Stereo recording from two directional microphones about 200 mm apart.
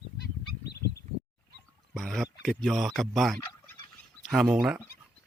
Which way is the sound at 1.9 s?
Centre (ahead or behind).